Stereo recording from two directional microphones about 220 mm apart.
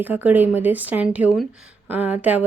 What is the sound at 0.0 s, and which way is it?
Speech, 10° right (ahead or behind).